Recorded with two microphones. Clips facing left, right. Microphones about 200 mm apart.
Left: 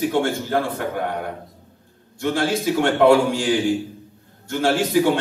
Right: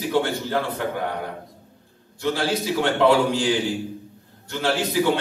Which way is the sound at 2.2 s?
50° left (ahead or behind).